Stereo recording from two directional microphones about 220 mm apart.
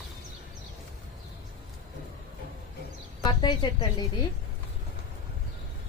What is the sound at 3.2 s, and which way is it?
Speech, 20° left (ahead or behind).